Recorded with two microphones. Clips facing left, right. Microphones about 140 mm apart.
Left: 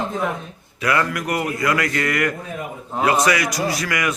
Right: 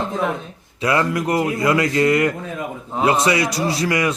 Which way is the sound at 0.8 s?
25° right (ahead or behind).